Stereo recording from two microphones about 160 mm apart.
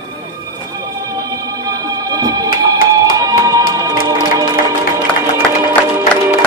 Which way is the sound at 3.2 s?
20° right (ahead or behind).